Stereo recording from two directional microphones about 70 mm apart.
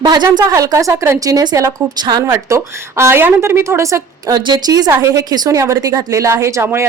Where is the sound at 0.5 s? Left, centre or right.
Right.